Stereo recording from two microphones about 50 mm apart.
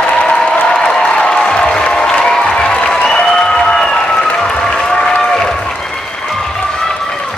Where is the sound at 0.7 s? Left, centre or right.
Centre.